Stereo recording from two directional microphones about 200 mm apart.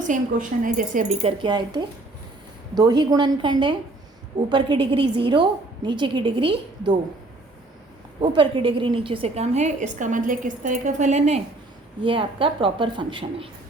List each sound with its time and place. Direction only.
0.0 s a woman's voice: 40° right (ahead or behind)
1.4 s a woman's voice: 20° right (ahead or behind)
8.2 s a woman's voice: 25° right (ahead or behind)
12.0 s a woman's voice: 25° right (ahead or behind)